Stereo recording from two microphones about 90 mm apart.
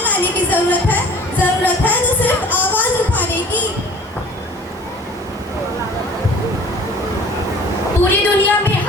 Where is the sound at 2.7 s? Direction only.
20° left (ahead or behind).